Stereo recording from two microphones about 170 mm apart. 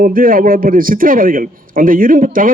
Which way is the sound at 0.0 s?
55° right (ahead or behind).